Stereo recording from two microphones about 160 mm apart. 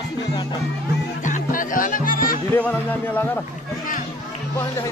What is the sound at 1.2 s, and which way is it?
Music, 55° left (ahead or behind).